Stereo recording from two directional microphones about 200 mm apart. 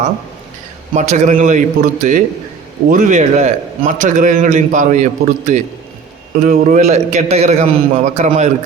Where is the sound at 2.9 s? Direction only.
40° right (ahead or behind).